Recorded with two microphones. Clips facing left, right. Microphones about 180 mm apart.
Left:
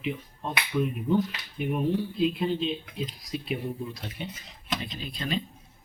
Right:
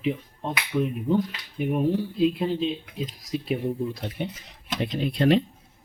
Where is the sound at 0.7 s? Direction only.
25° right (ahead or behind).